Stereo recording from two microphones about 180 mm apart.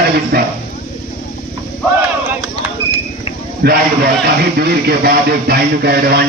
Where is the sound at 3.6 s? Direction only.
60° right (ahead or behind).